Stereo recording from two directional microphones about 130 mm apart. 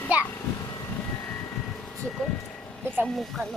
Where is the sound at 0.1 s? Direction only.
10° right (ahead or behind).